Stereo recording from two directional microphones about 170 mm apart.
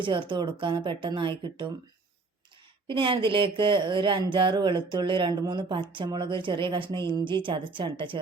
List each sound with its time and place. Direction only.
0.0 s speech: 30° right (ahead or behind)
2.8 s speech: 30° right (ahead or behind)